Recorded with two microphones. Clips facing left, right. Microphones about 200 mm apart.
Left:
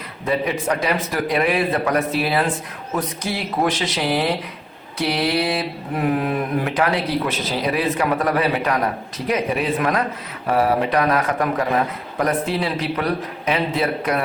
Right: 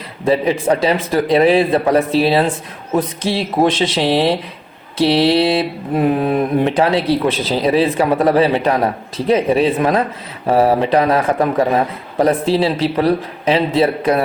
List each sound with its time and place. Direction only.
0.3 s mantra: 30° right (ahead or behind)